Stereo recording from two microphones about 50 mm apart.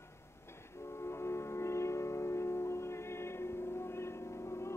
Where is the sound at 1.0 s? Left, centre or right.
Left.